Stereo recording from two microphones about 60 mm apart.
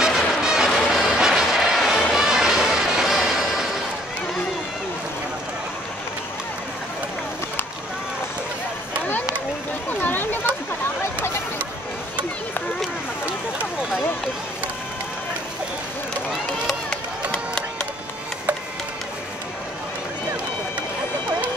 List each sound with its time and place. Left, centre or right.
0.1 s music: centre
9.8 s a sound: left
17.3 s music: centre